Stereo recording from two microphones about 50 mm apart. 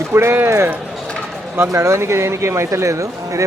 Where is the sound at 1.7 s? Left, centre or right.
Right.